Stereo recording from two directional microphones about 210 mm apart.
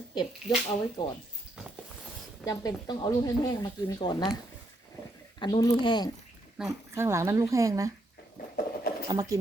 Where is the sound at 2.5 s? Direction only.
20° left (ahead or behind).